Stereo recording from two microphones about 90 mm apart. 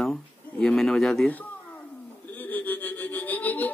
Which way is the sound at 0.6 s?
10° left (ahead or behind).